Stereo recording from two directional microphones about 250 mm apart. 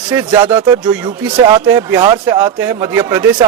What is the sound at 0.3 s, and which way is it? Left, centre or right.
Speech, centre.